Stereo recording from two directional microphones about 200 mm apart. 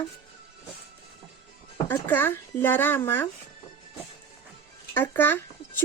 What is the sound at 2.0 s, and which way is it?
Speech, 10° left (ahead or behind).